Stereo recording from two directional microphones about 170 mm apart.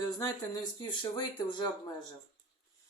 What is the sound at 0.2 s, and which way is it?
Speech, 20° left (ahead or behind).